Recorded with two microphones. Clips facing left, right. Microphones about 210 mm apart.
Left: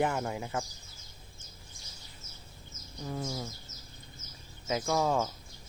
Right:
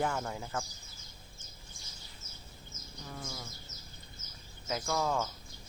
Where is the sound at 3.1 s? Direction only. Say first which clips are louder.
Left 8 dB; 25° left (ahead or behind).